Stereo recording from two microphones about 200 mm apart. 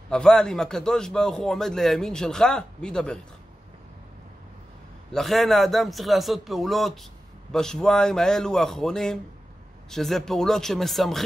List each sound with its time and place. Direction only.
0.1 s a man's voice: 5° left (ahead or behind)
5.1 s a man's voice: centre (ahead or behind)